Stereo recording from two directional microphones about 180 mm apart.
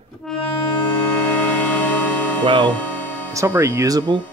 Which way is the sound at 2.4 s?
25° right (ahead or behind).